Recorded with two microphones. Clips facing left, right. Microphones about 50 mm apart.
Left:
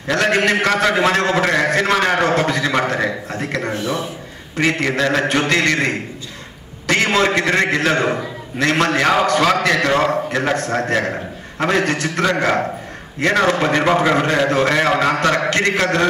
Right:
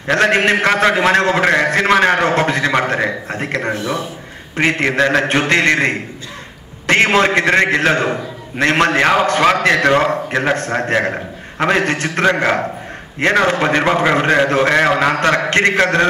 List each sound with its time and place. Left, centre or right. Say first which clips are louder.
0.1 s a man's voice: right 3 dB; right